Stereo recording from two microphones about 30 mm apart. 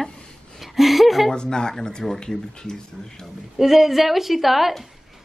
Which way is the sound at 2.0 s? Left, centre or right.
Centre.